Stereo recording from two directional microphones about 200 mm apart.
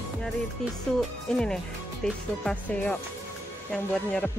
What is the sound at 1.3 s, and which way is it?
Speech, 5° left (ahead or behind).